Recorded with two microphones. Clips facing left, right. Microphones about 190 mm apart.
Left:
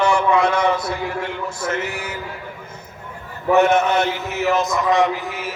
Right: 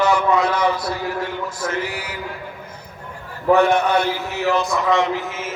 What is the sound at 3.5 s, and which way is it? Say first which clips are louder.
A man's voice: left 2 dB; 20° left (ahead or behind).